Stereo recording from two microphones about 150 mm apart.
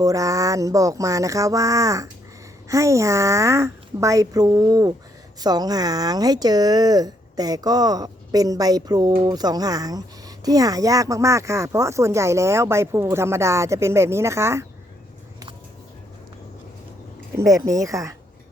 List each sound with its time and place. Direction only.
0.0 s speech: 25° right (ahead or behind)
17.3 s speech: 20° right (ahead or behind)